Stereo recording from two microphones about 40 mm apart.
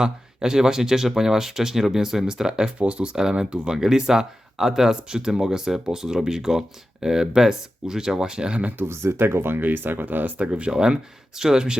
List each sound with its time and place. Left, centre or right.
0.0 s speech: centre
2.7 s speech: right
3.2 s speech: centre
8.8 s speech: right
9.6 s speech: right
10.3 s speech: right
10.7 s speech: centre